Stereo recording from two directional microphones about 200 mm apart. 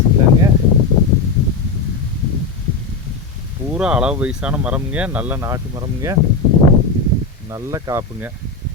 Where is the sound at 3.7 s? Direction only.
5° right (ahead or behind).